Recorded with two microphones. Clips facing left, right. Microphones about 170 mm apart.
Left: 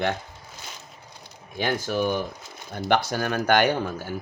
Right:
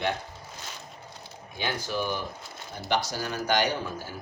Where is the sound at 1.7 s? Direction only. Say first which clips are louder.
Left 5 dB; 50° left (ahead or behind).